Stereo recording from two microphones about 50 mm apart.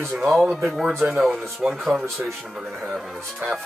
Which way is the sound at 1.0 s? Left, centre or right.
Right.